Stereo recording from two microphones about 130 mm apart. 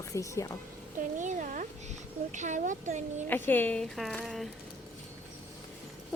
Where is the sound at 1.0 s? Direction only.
75° right (ahead or behind).